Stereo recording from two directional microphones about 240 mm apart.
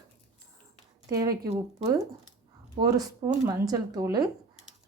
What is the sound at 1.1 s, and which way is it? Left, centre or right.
Speech, centre.